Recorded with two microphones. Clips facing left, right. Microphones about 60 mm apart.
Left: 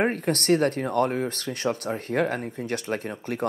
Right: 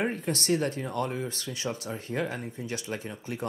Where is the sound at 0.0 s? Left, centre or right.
Left.